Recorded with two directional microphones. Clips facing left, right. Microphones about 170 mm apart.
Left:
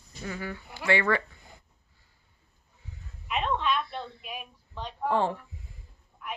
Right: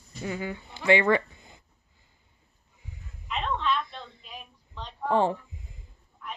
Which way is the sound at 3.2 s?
15° left (ahead or behind).